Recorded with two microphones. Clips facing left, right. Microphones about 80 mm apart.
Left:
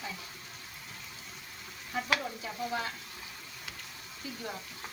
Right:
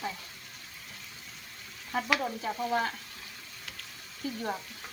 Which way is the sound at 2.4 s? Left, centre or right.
Right.